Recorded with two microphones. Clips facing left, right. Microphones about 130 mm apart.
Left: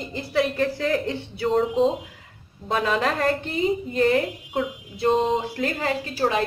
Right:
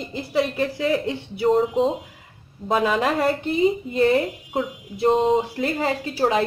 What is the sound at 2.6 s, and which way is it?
Speech, 10° right (ahead or behind).